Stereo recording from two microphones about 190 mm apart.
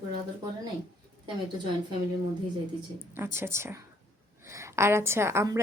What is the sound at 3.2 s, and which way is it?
Speech, 15° right (ahead or behind).